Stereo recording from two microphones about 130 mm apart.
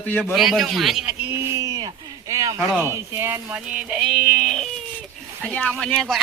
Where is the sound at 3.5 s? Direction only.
10° right (ahead or behind).